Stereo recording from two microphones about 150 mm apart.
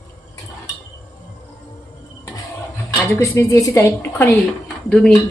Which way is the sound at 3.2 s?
20° left (ahead or behind).